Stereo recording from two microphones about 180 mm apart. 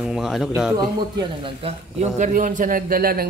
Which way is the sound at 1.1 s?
30° right (ahead or behind).